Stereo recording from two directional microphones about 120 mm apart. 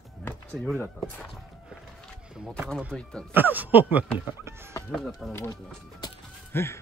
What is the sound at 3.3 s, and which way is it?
Speech, 15° right (ahead or behind).